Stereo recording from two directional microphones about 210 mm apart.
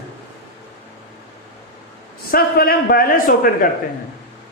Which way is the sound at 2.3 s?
45° left (ahead or behind).